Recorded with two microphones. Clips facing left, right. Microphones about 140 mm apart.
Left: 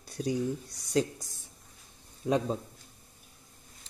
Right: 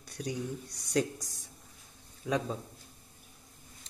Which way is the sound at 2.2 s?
30° left (ahead or behind).